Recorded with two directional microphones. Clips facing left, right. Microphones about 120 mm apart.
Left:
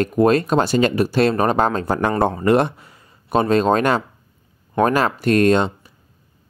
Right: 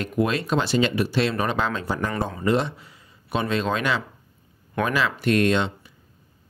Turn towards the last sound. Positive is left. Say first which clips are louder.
# left 6 dB
turn(degrees=40)  # may be behind; listen again after turning